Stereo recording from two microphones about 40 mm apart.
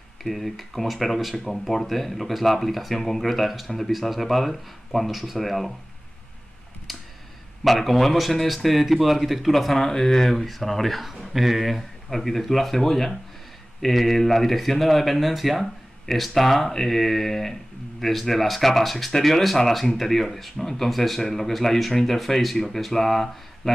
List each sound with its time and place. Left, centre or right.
0.2 s speech: centre
6.9 s a sound: centre
7.6 s speech: centre